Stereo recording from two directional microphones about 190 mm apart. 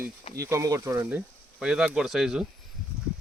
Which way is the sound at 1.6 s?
5° right (ahead or behind).